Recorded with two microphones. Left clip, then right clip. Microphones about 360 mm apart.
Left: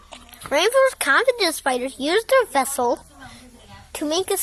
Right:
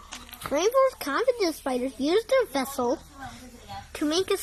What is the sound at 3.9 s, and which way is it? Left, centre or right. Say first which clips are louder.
Speech: left 3 dB; centre.